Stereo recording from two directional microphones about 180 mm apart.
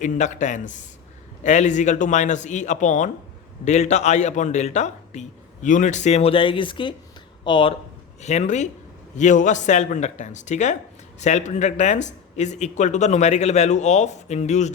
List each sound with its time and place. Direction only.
0.0 s speech: 40° left (ahead or behind); by 7.8 s 25° left (ahead or behind)
8.2 s speech: 40° left (ahead or behind)